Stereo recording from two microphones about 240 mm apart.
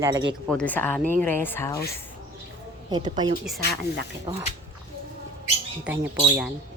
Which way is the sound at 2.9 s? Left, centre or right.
Centre.